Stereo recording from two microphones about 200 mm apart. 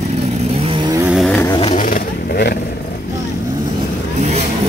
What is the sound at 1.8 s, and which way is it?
Vehicle, 45° left (ahead or behind).